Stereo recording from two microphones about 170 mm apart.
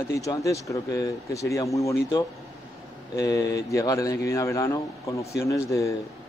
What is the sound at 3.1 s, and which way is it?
Speech, 20° left (ahead or behind).